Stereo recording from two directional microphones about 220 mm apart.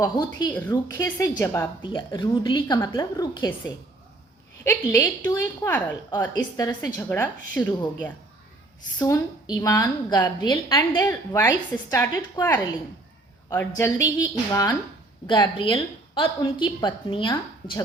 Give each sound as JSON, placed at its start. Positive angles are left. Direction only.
{"t": 0.0, "sound": "a woman's voice", "side_deg": 15}
{"t": 4.6, "sound": "a woman's voice", "side_deg": 10}
{"t": 9.0, "sound": "a woman's voice", "side_deg": 10}